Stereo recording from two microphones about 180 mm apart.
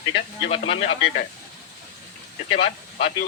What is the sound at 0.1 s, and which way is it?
Speech, 30° left (ahead or behind).